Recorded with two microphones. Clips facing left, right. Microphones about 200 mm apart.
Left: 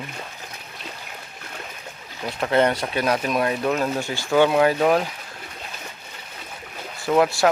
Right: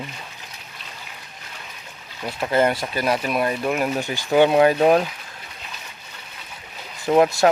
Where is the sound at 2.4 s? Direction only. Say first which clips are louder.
Even; 5° right (ahead or behind); by 5.0 s 25° right (ahead or behind).